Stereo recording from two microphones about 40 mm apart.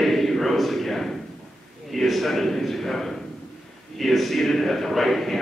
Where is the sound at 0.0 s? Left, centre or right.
Centre.